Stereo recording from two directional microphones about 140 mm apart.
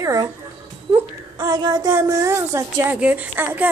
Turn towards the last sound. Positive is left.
turn(degrees=-15)  # may be behind; listen again after turning